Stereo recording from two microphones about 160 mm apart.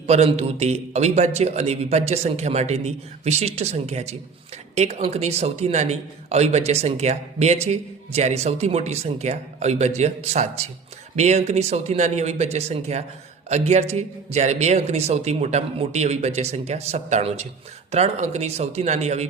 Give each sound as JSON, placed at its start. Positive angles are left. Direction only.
{"t": 0.1, "sound": "a man's voice", "side_deg": -40}